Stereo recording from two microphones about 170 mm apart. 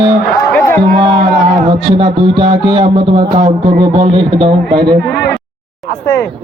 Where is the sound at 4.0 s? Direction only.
30° right (ahead or behind).